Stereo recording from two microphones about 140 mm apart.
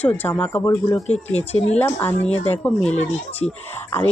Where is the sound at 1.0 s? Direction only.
50° left (ahead or behind).